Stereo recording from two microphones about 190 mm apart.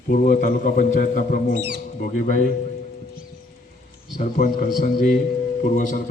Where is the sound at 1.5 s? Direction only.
60° right (ahead or behind).